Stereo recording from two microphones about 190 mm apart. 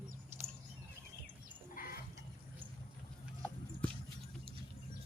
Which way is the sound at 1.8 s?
45° left (ahead or behind).